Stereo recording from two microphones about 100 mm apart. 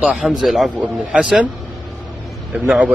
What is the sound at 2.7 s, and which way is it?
Speech, 15° right (ahead or behind).